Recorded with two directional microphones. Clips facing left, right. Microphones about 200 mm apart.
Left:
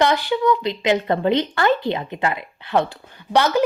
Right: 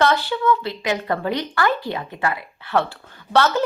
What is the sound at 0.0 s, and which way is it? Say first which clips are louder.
A woman's voice: left 1 dB; 15° left (ahead or behind).